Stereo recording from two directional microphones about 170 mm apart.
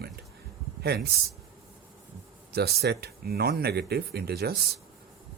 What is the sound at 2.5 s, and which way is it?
Speech, 70° right (ahead or behind).